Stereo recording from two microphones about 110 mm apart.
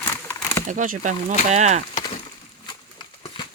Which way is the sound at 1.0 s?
90° right.